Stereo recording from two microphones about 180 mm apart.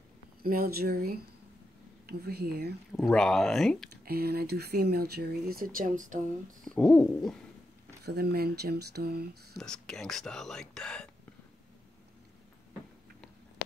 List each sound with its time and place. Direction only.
0.4 s speech: 55° right (ahead or behind)
3.0 s speech: 5° left (ahead or behind)
4.0 s speech: 60° right (ahead or behind)
6.6 s speech: 5° left (ahead or behind)
8.0 s speech: 60° right (ahead or behind)
9.6 s speech: 5° left (ahead or behind)